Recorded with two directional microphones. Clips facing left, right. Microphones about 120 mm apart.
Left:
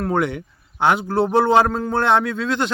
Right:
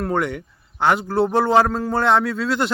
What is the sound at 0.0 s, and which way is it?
A man's voice, centre (ahead or behind).